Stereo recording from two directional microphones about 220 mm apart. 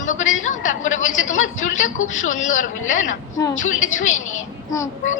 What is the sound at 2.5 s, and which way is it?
Speech, 35° left (ahead or behind).